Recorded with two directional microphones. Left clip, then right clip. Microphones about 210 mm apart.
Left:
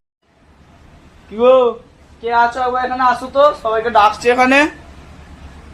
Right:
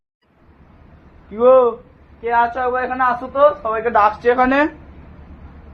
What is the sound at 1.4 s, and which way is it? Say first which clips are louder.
A man's voice: left 1 dB; 25° left (ahead or behind).